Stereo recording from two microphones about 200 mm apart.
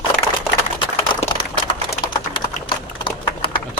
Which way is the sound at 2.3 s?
25° left (ahead or behind).